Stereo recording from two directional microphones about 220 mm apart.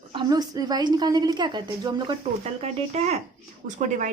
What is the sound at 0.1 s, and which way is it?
A woman's voice, 20° right (ahead or behind).